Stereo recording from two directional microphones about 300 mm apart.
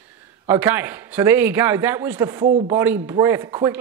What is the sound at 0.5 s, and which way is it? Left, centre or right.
A man's voice, centre.